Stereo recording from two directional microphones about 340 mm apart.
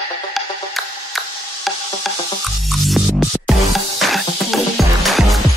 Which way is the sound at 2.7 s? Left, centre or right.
Centre.